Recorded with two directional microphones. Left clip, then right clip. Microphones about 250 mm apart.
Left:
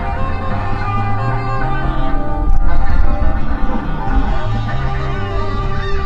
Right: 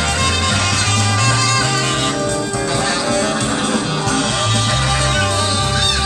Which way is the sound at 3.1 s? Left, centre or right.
Right.